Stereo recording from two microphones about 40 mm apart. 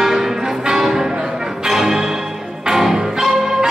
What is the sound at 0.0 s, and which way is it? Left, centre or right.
Music, centre.